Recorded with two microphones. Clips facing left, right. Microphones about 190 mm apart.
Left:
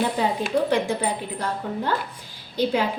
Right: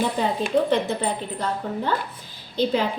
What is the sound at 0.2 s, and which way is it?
A woman's voice, 10° left (ahead or behind).